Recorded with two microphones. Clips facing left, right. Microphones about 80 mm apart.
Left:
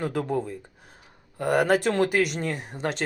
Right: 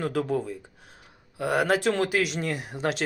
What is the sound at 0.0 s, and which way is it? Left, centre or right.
Speech, centre.